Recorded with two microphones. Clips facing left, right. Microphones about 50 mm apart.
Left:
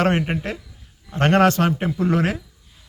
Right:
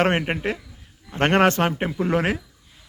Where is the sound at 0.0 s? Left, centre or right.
Right.